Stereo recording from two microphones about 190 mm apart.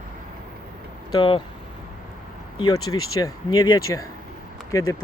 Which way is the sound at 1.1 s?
25° left (ahead or behind).